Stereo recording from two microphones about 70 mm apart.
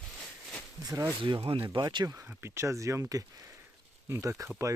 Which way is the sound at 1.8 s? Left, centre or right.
Right.